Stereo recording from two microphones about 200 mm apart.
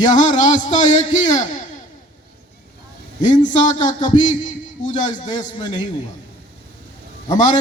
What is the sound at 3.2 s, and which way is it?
A man's voice, 40° left (ahead or behind).